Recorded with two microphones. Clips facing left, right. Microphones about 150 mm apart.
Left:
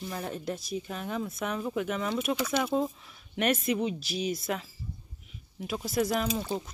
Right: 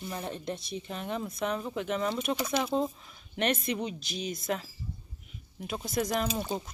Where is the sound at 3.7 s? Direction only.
5° left (ahead or behind).